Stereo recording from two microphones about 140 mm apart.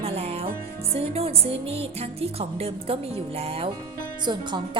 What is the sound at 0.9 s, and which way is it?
Speech, 45° right (ahead or behind).